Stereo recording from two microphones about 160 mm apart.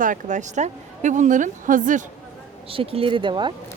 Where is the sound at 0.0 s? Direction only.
55° right (ahead or behind).